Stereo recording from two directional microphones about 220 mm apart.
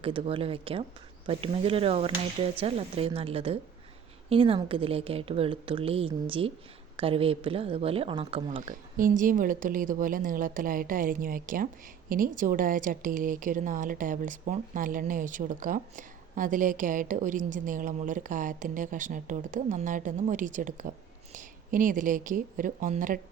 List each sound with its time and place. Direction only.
0.0 s speech: 25° right (ahead or behind)
9.0 s a woman's voice: 40° right (ahead or behind)